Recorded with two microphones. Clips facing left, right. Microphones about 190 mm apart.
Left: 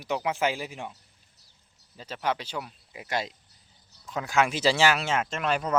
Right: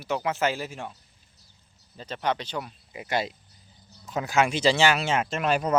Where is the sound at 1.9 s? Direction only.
5° left (ahead or behind).